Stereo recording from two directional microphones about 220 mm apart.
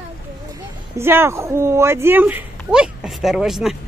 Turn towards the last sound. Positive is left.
turn(degrees=0)  # may be behind; listen again after turning